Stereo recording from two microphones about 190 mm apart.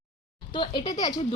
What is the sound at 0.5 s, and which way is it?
Speech, 25° left (ahead or behind).